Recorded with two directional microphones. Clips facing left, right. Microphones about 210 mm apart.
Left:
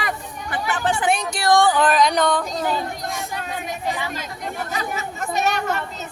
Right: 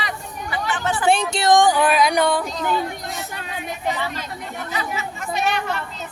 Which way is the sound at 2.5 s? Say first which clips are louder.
Even; 45° left (ahead or behind).